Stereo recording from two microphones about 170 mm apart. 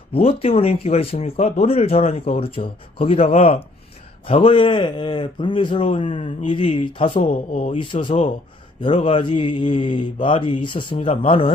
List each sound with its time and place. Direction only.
0.1 s speech: 35° left (ahead or behind)